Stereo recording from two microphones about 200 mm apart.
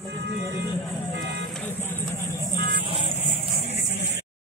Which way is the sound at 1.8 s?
10° left (ahead or behind).